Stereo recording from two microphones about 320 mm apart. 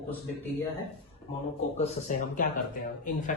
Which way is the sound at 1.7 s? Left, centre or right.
Left.